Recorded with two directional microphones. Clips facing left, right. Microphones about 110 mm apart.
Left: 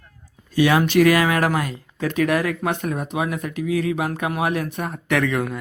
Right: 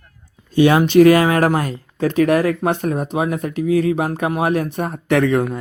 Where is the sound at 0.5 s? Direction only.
30° right (ahead or behind).